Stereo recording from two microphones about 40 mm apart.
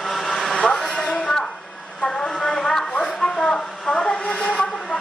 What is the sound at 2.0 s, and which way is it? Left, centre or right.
Vehicle, centre.